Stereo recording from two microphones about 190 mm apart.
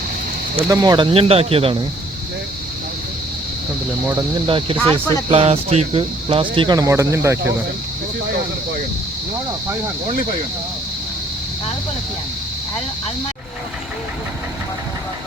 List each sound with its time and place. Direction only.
0.7 s speech: 20° right (ahead or behind)
4.4 s speech: 30° right (ahead or behind)
4.8 s speech: 10° left (ahead or behind)
5.3 s speech: 30° right (ahead or behind); by 7.3 s 15° right (ahead or behind)